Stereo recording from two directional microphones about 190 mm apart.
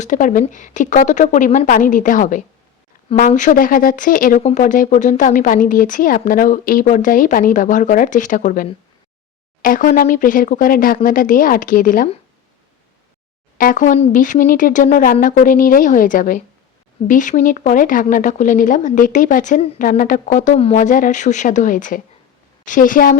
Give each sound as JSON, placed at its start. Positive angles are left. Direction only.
{"t": 0.0, "sound": "a woman's voice", "side_deg": 40}
{"t": 13.6, "sound": "speech", "side_deg": 45}